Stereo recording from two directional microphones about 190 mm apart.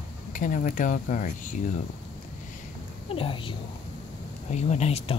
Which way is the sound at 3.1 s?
30° left (ahead or behind).